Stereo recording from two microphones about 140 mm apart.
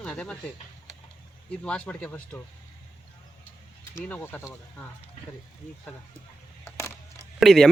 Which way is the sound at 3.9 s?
15° left (ahead or behind).